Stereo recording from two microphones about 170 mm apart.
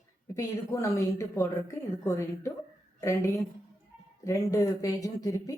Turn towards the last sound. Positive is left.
turn(degrees=20)  # may be behind; listen again after turning